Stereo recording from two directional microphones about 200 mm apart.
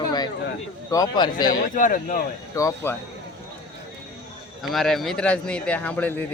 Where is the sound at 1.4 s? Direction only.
40° left (ahead or behind).